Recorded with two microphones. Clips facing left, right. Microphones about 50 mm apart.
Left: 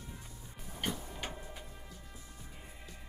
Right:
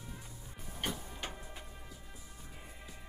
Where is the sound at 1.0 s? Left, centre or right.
Centre.